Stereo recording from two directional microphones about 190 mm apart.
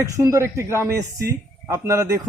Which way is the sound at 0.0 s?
15° right (ahead or behind).